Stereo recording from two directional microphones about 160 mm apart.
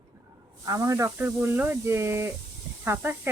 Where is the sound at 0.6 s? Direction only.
20° right (ahead or behind).